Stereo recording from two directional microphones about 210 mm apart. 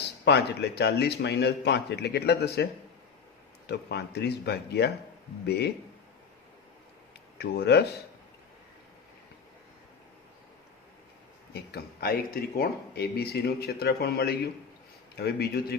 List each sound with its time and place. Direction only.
0.3 s speech: 55° left (ahead or behind)
3.7 s speech: 50° left (ahead or behind)
7.3 s speech: 50° left (ahead or behind)
11.5 s speech: 50° left (ahead or behind)